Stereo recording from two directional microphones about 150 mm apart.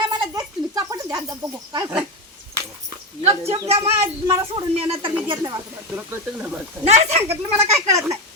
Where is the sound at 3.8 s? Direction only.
20° right (ahead or behind).